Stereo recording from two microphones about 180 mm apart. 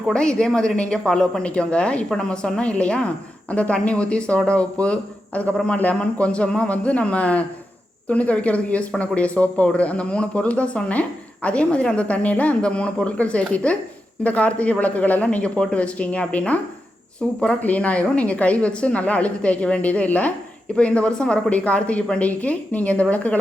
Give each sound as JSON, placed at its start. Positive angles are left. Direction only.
{"t": 0.0, "sound": "speech", "side_deg": 5}